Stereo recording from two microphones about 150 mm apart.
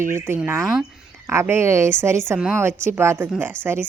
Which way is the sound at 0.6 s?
Centre (ahead or behind).